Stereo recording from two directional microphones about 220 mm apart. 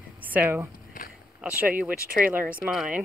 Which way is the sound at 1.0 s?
40° left (ahead or behind).